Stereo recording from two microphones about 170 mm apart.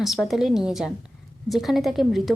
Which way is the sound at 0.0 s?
Centre (ahead or behind).